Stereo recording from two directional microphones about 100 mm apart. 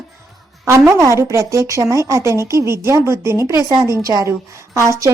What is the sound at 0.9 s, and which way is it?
Speech, 30° right (ahead or behind).